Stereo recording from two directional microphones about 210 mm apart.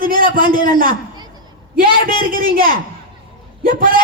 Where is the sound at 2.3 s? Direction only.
40° right (ahead or behind).